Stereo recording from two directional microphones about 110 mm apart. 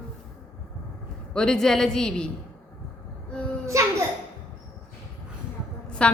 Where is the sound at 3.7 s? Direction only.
30° right (ahead or behind).